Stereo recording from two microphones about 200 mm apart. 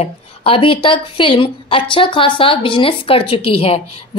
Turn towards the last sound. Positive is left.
turn(degrees=30)  # may be behind; listen again after turning